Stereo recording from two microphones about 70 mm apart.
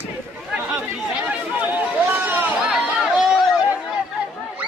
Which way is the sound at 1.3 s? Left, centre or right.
Right.